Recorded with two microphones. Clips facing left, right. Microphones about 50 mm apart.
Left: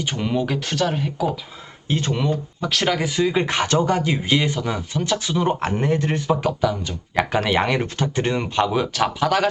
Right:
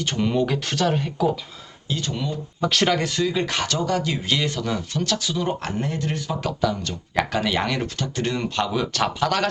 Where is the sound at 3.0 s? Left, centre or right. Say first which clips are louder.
Left 3 dB; centre.